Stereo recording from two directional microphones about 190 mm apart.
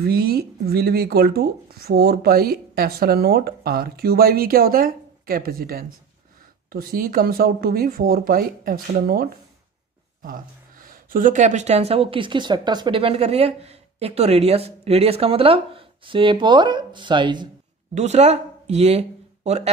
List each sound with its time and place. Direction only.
0.0 s speech: 55° right (ahead or behind); by 17.5 s 25° right (ahead or behind)
17.9 s speech: 35° right (ahead or behind)